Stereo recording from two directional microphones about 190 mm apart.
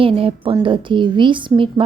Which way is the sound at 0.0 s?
30° right (ahead or behind).